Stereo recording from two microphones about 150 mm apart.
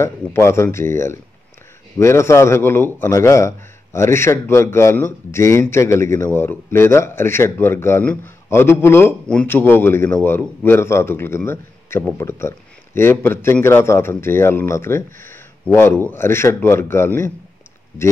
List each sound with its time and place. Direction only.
0.0 s a man's voice: 15° left (ahead or behind)